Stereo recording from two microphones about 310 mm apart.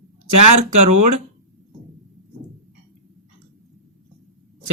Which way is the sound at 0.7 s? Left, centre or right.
Right.